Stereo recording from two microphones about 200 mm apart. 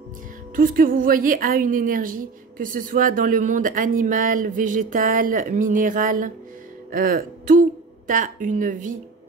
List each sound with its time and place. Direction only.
0.6 s a woman's voice: 45° right (ahead or behind)